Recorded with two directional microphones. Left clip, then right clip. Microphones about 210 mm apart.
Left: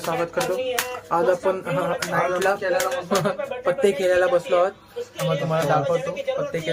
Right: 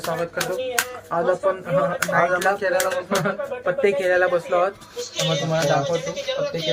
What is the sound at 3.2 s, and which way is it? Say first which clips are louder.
Speech: even; 10° left (ahead or behind).